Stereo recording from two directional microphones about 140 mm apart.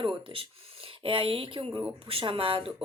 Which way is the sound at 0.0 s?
40° right (ahead or behind).